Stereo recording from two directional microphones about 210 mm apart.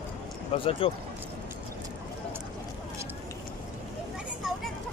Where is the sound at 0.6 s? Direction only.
25° left (ahead or behind).